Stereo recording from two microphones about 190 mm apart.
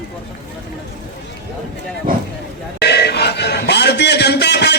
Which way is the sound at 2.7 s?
60° left (ahead or behind).